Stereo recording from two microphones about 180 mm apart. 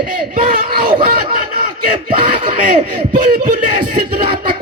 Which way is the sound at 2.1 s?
30° right (ahead or behind).